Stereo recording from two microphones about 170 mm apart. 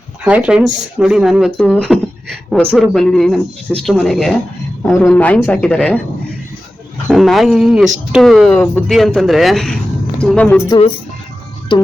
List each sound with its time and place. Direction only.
0.3 s speech: 5° right (ahead or behind)
7.1 s speech: centre (ahead or behind)
10.7 s speech: 30° left (ahead or behind)